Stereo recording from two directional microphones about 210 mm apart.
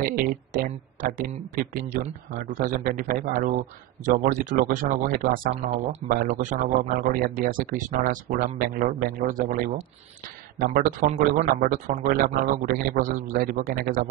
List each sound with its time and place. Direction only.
0.0 s speech: 45° right (ahead or behind)
10.7 s speech: 40° right (ahead or behind)